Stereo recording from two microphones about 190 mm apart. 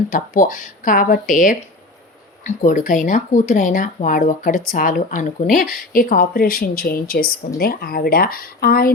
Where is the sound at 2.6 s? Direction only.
45° left (ahead or behind).